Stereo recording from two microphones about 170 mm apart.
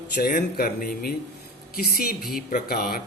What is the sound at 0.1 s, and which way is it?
A man's voice, 60° left (ahead or behind).